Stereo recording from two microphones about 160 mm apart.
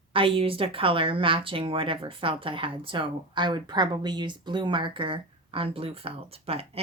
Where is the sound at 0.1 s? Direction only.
35° right (ahead or behind).